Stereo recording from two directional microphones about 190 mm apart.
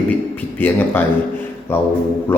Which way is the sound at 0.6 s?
10° left (ahead or behind).